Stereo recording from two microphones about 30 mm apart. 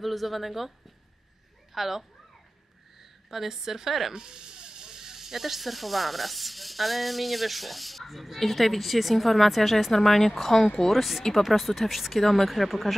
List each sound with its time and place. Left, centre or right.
0.0 s a woman's voice: centre
4.1 s speech: right; by 9.9 s centre
9.9 s a woman's voice: centre
10.9 s speech: centre